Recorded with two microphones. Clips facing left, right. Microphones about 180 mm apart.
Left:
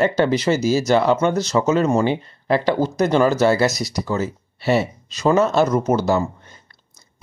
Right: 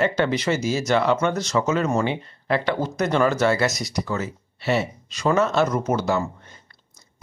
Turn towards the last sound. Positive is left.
turn(degrees=35)  # may be behind; listen again after turning